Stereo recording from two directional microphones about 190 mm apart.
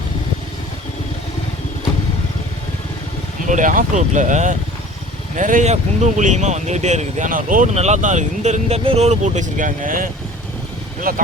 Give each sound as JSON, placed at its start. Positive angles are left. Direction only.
{"t": 3.4, "sound": "speech", "side_deg": -40}